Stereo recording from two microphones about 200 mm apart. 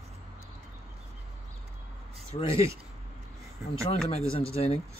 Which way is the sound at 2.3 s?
30° left (ahead or behind).